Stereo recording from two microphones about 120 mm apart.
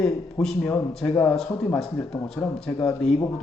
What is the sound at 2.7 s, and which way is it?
Speech, 30° left (ahead or behind).